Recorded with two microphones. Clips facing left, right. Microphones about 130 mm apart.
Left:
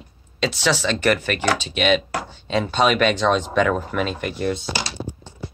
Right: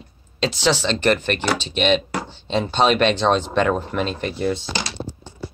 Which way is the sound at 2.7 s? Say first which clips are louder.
Right 1 dB; 25° right (ahead or behind).